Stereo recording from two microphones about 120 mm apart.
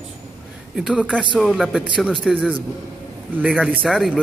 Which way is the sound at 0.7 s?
5° right (ahead or behind).